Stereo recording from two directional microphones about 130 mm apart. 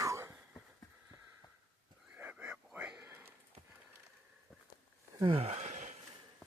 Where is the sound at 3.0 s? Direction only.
15° right (ahead or behind).